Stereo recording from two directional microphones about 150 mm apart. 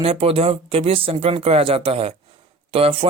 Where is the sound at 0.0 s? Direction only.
40° right (ahead or behind).